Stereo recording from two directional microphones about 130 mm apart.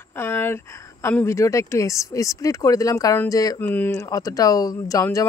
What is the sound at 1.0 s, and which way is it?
Speech, 20° left (ahead or behind).